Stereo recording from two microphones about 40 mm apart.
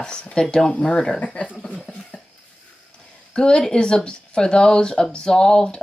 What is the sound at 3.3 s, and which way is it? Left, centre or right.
Speech, centre.